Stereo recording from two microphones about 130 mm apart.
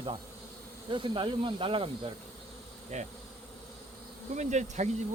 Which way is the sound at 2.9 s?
60° right (ahead or behind).